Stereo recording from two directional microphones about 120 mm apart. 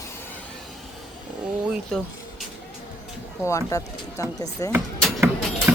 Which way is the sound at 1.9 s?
5° left (ahead or behind).